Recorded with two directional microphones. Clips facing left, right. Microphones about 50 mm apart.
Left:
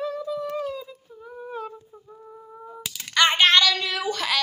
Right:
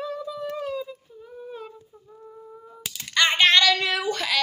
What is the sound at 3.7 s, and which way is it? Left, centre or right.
Child singing, right.